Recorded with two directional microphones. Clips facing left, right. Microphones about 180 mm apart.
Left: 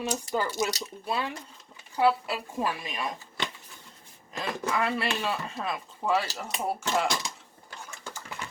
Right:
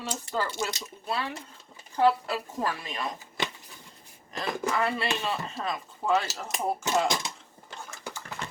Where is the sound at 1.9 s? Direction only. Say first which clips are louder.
Right 1 dB; 10° left (ahead or behind).